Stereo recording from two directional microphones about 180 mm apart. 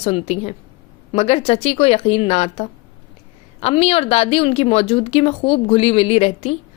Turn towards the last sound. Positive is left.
turn(degrees=35)  # may be behind; listen again after turning